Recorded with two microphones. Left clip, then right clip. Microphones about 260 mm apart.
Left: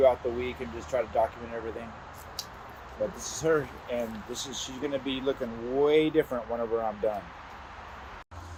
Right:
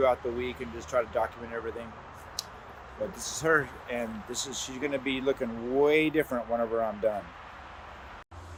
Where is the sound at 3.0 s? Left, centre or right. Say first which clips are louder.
Left 3 dB; right.